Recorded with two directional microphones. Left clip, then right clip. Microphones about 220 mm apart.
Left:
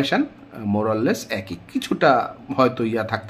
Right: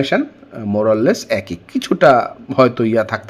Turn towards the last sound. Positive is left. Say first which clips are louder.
# right 7 dB
turn(degrees=-25)  # may be behind; listen again after turning